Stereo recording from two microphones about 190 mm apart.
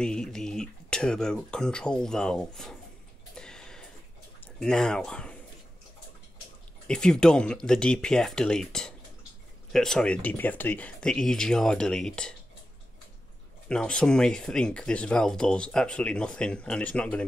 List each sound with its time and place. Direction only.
0.0 s speech: 5° left (ahead or behind)
3.3 s a sound: 5° left (ahead or behind)
4.6 s speech: 5° left (ahead or behind)
6.9 s speech: 5° left (ahead or behind)
13.7 s speech: 5° left (ahead or behind)